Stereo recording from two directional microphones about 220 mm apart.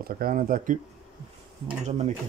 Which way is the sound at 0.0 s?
40° right (ahead or behind).